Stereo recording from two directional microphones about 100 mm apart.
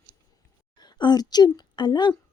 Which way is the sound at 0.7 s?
45° left (ahead or behind).